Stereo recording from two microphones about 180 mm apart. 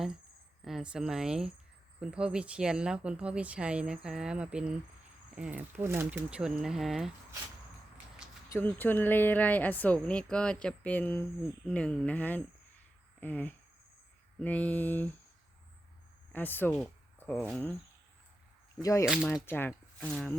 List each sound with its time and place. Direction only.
0.6 s speech: centre (ahead or behind)
8.4 s speech: 10° left (ahead or behind)
16.3 s speech: 10° left (ahead or behind)
18.8 s speech: 20° left (ahead or behind)
19.0 s speech: 5° right (ahead or behind)
19.5 s speech: 10° left (ahead or behind)